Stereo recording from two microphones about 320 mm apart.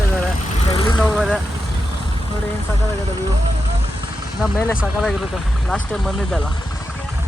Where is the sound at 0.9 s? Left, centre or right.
Centre.